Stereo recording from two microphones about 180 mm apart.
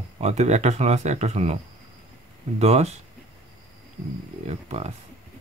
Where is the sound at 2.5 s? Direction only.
35° right (ahead or behind).